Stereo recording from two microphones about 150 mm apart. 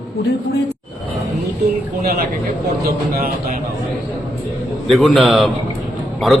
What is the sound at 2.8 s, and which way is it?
Speech, 90° right.